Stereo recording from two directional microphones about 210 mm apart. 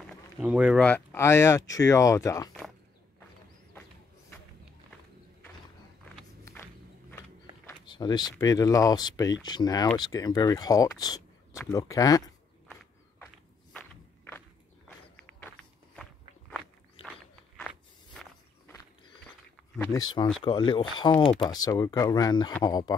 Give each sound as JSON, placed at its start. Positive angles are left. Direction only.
{"t": 0.0, "sound": "a sound", "side_deg": -5}
{"t": 0.8, "sound": "speech", "side_deg": 10}
{"t": 6.4, "sound": "walk", "side_deg": 10}
{"t": 9.4, "sound": "speech", "side_deg": 20}
{"t": 16.0, "sound": "walk", "side_deg": 0}
{"t": 19.8, "sound": "speech", "side_deg": 15}